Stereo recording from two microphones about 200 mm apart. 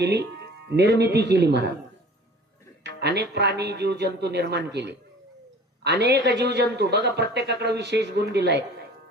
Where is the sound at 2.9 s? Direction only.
55° right (ahead or behind).